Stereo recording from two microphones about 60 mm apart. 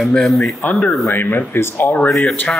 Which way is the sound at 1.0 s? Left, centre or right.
Left.